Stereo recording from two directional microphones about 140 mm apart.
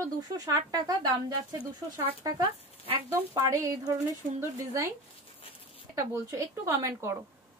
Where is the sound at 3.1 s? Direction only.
20° right (ahead or behind).